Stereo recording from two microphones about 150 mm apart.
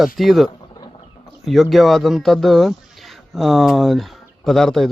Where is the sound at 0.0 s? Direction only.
Centre (ahead or behind).